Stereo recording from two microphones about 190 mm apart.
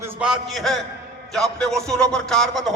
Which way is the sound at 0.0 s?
5° right (ahead or behind).